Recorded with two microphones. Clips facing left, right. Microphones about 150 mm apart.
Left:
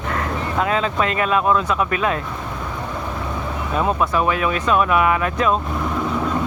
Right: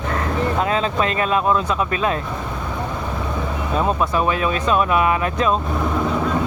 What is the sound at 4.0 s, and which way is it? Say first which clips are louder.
Speech: even; 25° right (ahead or behind).